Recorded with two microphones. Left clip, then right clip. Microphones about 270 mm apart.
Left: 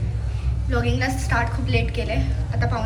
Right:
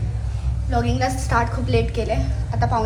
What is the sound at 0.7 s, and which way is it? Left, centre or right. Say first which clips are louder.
A woman's voice: right 2 dB; centre.